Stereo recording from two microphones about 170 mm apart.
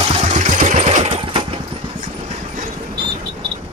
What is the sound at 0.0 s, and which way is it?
Engine, 35° right (ahead or behind).